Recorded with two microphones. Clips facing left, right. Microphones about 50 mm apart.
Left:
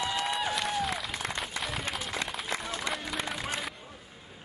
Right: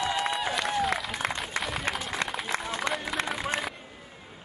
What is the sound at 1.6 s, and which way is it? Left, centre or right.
Run, centre.